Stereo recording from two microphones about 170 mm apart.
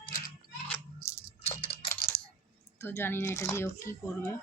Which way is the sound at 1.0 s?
15° left (ahead or behind).